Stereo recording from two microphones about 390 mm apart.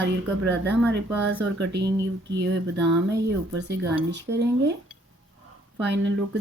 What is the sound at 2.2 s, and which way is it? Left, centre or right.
Speech, right.